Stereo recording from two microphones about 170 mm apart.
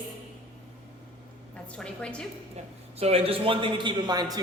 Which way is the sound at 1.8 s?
5° left (ahead or behind).